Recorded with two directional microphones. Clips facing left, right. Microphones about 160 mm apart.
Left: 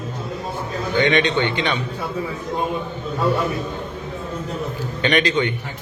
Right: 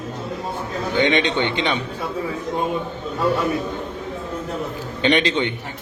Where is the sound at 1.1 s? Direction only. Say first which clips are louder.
Left 1 dB; 20° right (ahead or behind).